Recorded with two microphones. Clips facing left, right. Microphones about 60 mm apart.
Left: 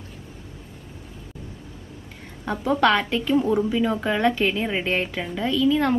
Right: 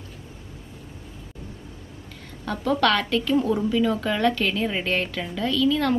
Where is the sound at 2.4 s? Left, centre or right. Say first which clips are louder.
Left 2 dB; centre.